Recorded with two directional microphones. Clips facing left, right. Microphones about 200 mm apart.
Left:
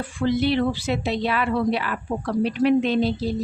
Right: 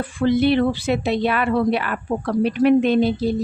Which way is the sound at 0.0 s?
55° right (ahead or behind).